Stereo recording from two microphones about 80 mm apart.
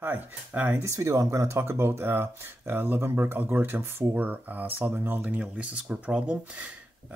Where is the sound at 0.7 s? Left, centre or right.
Right.